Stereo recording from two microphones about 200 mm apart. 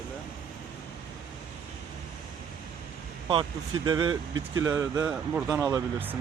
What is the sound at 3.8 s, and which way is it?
Speech, 25° right (ahead or behind).